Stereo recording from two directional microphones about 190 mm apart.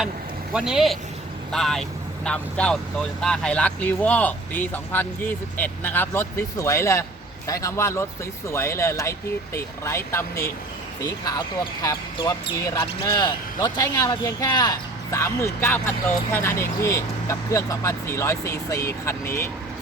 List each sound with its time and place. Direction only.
0.5 s speech: 5° right (ahead or behind); by 19.5 s 15° left (ahead or behind)